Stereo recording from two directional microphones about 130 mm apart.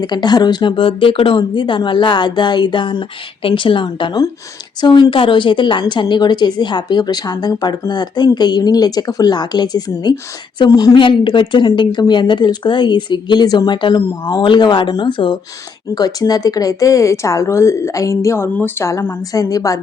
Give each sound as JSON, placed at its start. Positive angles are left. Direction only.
{"t": 0.0, "sound": "a woman's voice", "side_deg": 35}
{"t": 10.9, "sound": "a woman's voice", "side_deg": 40}